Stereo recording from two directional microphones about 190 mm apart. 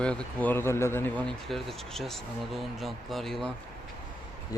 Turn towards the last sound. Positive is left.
turn(degrees=0)  # may be behind; listen again after turning